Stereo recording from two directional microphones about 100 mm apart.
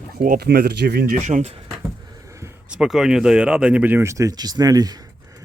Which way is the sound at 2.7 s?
5° right (ahead or behind).